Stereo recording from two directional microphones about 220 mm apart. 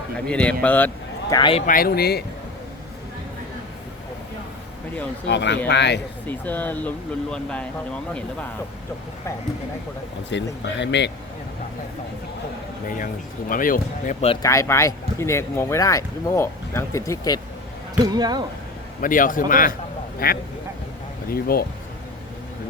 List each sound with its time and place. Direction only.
0.3 s speech: 5° left (ahead or behind)
1.3 s speech: 20° left (ahead or behind)
1.6 s speech: 40° left (ahead or behind)
5.3 s speech: 50° left (ahead or behind)
6.2 s speech: 5° left (ahead or behind)
10.2 s speech: 55° left (ahead or behind)
13.5 s speech: 40° left (ahead or behind)
14.4 s speech: 15° left (ahead or behind)
18.0 s speech: 15° right (ahead or behind)
19.0 s speech: 40° left (ahead or behind)